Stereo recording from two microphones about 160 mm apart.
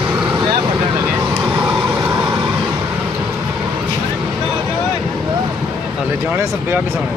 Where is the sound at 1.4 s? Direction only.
5° right (ahead or behind).